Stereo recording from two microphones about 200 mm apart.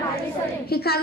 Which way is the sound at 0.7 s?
50° left (ahead or behind).